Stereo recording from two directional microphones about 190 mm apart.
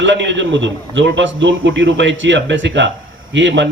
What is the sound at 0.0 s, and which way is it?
A man's voice, 70° right (ahead or behind).